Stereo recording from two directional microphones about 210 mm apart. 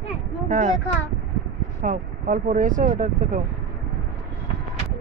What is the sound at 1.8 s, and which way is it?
A man's voice, 40° right (ahead or behind).